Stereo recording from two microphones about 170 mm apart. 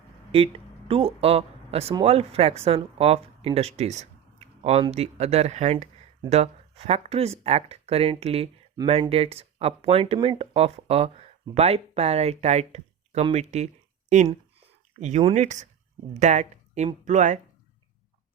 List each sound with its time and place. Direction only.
0.3 s speech: 35° right (ahead or behind)